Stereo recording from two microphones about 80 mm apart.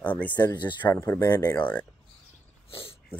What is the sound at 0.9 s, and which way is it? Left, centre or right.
Speech, left.